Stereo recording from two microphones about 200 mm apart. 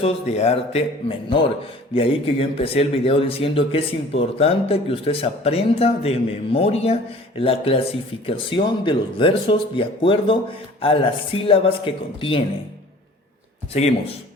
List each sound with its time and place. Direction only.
0.0 s a man's voice: 35° left (ahead or behind)